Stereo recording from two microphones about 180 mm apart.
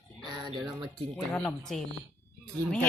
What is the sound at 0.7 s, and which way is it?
Speech, 25° right (ahead or behind).